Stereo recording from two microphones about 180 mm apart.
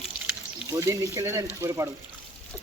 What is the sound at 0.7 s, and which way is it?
Speech, 20° right (ahead or behind).